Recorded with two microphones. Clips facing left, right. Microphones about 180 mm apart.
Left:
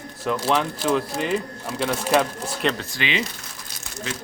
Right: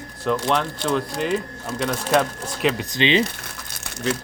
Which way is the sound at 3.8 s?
70° right (ahead or behind).